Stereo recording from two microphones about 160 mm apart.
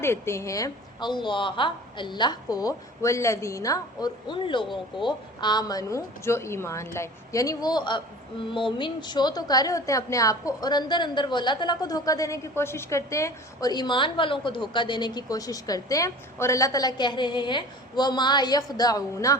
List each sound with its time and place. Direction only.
0.0 s a woman's voice: 15° left (ahead or behind)